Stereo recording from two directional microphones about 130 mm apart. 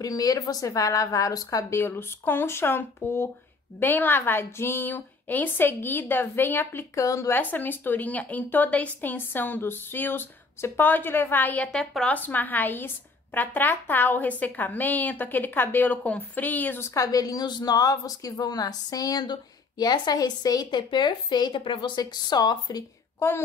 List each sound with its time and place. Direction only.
0.0 s a woman's voice: 30° left (ahead or behind)
23.1 s speech: 20° left (ahead or behind)